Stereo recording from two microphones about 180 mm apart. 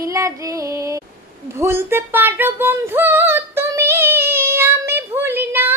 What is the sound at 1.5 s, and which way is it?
Female singing, 15° right (ahead or behind).